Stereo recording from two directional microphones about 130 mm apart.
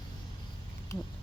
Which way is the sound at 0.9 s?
25° left (ahead or behind).